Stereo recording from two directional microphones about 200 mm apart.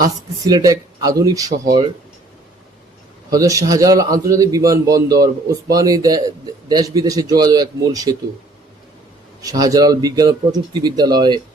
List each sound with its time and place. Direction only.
0.4 s a man's voice: 20° right (ahead or behind)
3.2 s a man's voice: 15° right (ahead or behind)
9.4 s speech: 15° right (ahead or behind)